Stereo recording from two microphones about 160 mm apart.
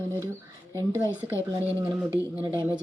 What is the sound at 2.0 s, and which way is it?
Speech, 10° right (ahead or behind).